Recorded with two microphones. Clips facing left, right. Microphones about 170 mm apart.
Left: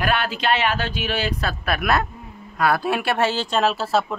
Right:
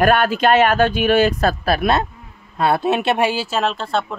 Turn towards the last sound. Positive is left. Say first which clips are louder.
# even
turn(degrees=5)  # may be behind; listen again after turning